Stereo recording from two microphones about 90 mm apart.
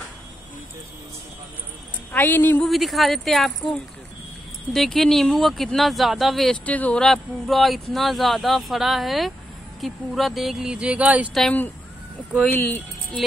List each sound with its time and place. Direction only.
2.1 s speech: 20° left (ahead or behind)
2.6 s speech: centre (ahead or behind)
6.6 s speech: 15° left (ahead or behind)
7.1 s speech: centre (ahead or behind); by 11.2 s 15° right (ahead or behind)
12.4 s speech: 20° left (ahead or behind)